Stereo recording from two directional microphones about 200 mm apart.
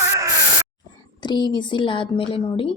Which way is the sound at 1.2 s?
20° left (ahead or behind).